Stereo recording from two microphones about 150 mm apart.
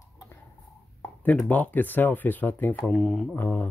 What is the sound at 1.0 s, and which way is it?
Speech, 10° left (ahead or behind).